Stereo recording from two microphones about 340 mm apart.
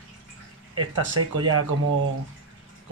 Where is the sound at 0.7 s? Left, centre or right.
Right.